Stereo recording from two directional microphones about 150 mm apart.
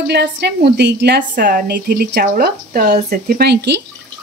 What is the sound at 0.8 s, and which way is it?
Speech, 80° right.